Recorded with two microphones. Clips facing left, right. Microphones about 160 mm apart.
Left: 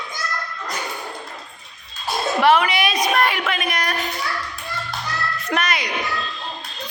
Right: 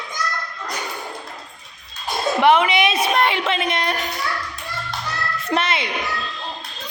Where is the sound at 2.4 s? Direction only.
20° right (ahead or behind).